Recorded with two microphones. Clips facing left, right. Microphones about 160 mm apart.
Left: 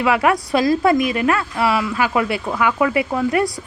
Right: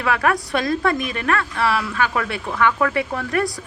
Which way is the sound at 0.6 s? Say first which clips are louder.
Left 5 dB; 25° left (ahead or behind).